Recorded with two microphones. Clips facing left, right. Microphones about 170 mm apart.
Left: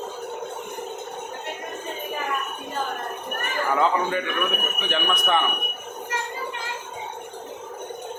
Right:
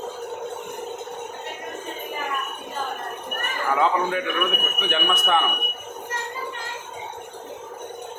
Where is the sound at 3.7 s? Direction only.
Centre (ahead or behind).